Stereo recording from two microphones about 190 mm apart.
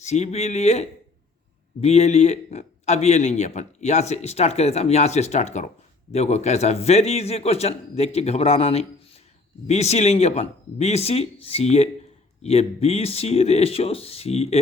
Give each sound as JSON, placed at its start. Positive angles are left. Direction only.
{"t": 0.0, "sound": "a man's voice", "side_deg": 35}